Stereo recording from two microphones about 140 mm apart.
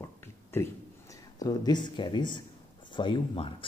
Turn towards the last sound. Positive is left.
turn(degrees=40)  # may be behind; listen again after turning